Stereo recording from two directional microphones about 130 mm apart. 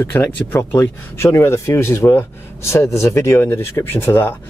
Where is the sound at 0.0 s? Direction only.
15° left (ahead or behind).